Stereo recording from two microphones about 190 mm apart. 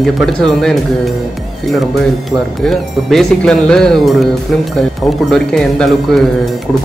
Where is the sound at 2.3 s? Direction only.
Centre (ahead or behind).